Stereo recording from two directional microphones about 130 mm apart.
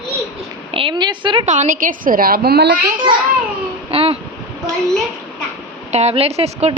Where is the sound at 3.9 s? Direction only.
50° right (ahead or behind).